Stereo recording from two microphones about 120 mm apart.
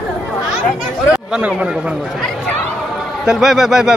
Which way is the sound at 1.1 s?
10° right (ahead or behind).